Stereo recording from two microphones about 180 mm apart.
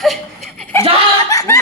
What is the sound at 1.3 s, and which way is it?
Speech, 15° left (ahead or behind).